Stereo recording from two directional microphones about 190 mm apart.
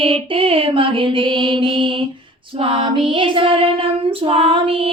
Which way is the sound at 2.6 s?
25° right (ahead or behind).